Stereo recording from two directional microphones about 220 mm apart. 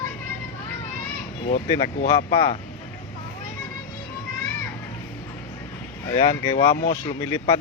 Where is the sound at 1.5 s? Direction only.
30° left (ahead or behind).